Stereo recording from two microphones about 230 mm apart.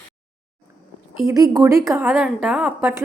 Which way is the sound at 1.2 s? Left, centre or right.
Centre.